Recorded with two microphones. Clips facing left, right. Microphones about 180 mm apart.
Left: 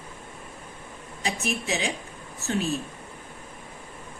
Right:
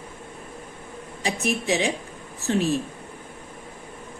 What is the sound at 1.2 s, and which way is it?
Speech, 35° right (ahead or behind).